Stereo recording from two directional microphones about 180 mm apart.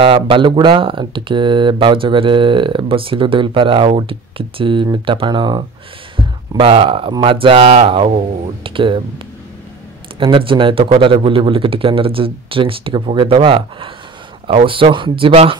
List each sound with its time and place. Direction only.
0.0 s speech: 30° right (ahead or behind)
10.1 s speech: 30° right (ahead or behind)